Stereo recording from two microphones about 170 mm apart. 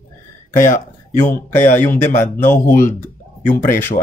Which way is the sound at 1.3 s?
10° left (ahead or behind).